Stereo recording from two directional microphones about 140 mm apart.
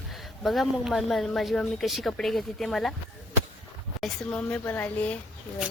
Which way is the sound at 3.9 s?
5° left (ahead or behind).